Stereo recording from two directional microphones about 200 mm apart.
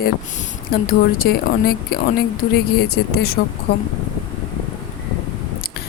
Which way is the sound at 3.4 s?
55° left (ahead or behind).